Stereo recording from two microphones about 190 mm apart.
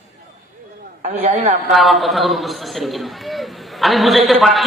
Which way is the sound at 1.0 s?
35° right (ahead or behind).